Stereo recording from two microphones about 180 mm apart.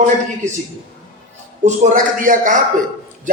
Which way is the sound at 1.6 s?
45° right (ahead or behind).